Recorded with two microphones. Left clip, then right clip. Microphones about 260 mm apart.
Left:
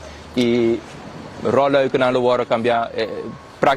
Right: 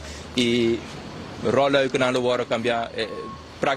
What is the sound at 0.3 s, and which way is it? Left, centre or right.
A man's voice, left.